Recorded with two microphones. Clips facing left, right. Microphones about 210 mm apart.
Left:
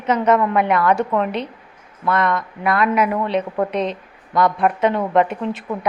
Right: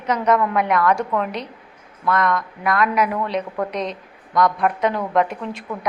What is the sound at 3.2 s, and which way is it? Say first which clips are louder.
Speech: left 3 dB; 25° left (ahead or behind).